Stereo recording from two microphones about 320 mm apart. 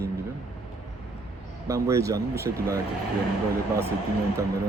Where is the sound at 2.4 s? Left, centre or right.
Right.